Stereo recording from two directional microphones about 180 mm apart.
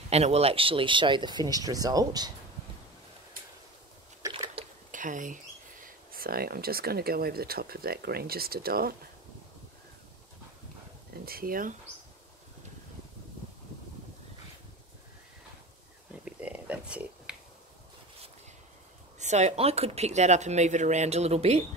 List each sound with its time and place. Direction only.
0.1 s speech: 35° right (ahead or behind)
4.2 s squish: 20° right (ahead or behind)
4.9 s speech: 45° right (ahead or behind)
6.1 s speech: 55° right (ahead or behind)
11.2 s speech: 55° right (ahead or behind)
16.1 s a sound: 5° right (ahead or behind)
19.1 s speech: 40° right (ahead or behind)